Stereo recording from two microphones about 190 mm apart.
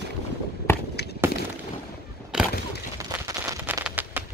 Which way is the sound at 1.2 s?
10° right (ahead or behind).